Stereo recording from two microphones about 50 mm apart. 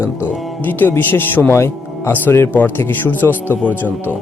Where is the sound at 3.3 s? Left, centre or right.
Right.